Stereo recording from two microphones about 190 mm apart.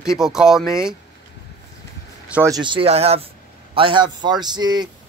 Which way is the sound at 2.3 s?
15° right (ahead or behind).